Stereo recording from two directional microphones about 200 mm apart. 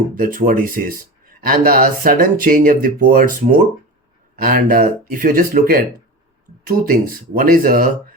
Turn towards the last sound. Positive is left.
turn(degrees=-45)  # may be behind; listen again after turning